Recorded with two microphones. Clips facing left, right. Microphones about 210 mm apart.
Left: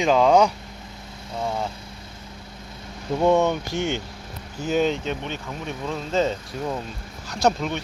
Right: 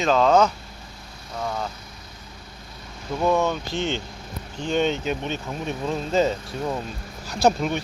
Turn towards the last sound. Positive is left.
turn(degrees=-5)  # may be behind; listen again after turning